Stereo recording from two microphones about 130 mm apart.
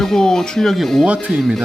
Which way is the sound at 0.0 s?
5° left (ahead or behind).